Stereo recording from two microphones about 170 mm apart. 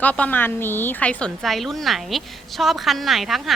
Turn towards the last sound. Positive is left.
turn(degrees=0)  # may be behind; listen again after turning